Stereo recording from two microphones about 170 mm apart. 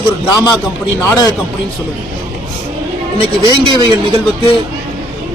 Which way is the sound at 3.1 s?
30° left (ahead or behind).